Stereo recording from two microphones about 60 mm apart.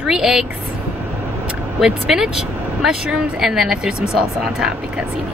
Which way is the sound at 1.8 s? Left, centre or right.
Centre.